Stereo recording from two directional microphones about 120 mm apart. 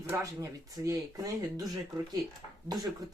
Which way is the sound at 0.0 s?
25° right (ahead or behind).